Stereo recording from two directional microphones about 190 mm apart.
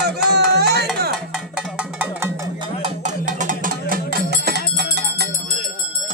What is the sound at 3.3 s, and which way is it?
Music, 45° right (ahead or behind).